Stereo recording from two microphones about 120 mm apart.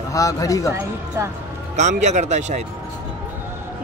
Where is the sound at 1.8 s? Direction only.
75° right (ahead or behind).